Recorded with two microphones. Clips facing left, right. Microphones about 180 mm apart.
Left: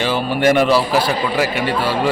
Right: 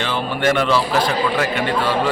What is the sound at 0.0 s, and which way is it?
A man's voice, 10° left (ahead or behind).